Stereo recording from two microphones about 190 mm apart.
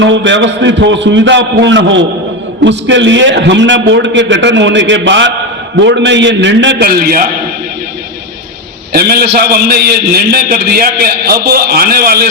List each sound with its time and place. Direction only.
0.0 s a man's voice: 75° right (ahead or behind)
6.8 s a man's voice: 50° right (ahead or behind)
8.9 s a man's voice: 55° right (ahead or behind)